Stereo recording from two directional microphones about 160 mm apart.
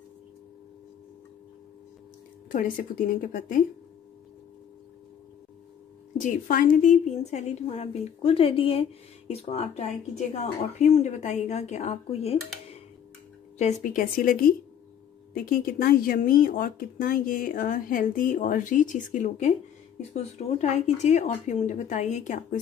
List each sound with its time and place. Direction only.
3.2 s speech: 60° left (ahead or behind)
6.1 s speech: 55° left (ahead or behind)
13.9 s speech: 60° left (ahead or behind)